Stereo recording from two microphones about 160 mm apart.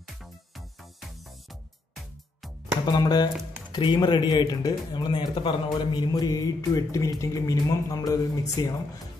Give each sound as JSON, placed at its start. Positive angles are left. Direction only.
{"t": 0.0, "sound": "music", "side_deg": 0}
{"t": 2.8, "sound": "speech", "side_deg": 25}